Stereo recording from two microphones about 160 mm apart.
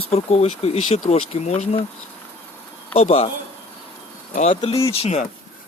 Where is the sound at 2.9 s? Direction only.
40° left (ahead or behind).